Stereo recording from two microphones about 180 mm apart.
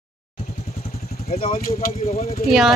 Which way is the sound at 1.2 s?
35° left (ahead or behind).